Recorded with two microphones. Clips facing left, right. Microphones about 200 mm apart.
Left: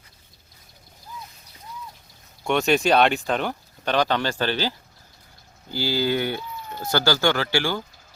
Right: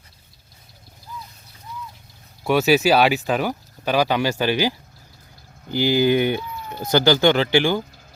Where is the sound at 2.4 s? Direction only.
5° right (ahead or behind).